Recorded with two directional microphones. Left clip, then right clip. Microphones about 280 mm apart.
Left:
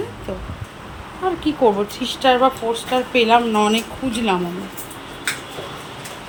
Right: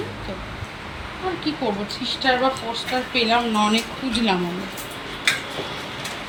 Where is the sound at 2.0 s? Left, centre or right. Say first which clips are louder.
Left 4 dB; centre.